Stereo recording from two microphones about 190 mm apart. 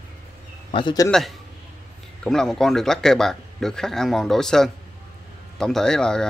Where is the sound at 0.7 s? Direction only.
25° left (ahead or behind).